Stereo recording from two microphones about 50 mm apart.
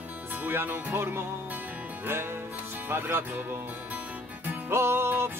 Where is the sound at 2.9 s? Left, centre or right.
Right.